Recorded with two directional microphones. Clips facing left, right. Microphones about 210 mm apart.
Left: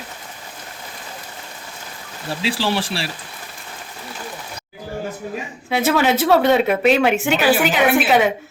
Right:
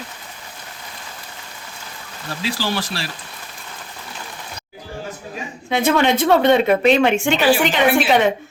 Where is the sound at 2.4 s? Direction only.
25° left (ahead or behind).